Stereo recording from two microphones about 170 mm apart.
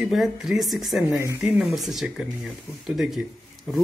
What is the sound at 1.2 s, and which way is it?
Speech, 15° right (ahead or behind).